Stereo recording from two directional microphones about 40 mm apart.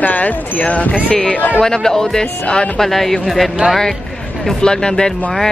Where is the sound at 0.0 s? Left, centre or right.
Left.